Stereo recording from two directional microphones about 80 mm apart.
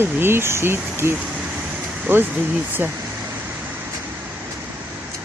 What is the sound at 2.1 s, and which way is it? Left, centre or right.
Speech, right.